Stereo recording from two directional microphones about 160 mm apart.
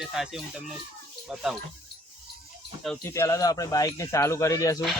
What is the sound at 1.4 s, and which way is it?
Speech, centre (ahead or behind).